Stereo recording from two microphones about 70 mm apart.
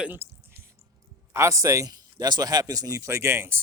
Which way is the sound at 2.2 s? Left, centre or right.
Right.